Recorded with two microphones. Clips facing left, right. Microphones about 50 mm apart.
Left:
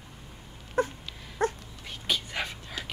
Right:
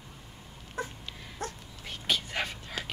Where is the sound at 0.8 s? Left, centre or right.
Left.